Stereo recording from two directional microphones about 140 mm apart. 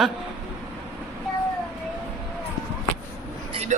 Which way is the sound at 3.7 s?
60° right (ahead or behind).